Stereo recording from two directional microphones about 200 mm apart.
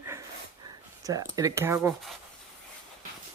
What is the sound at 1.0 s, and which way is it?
Speech, 15° right (ahead or behind).